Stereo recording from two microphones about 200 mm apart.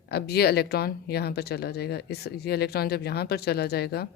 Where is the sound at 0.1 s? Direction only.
50° left (ahead or behind).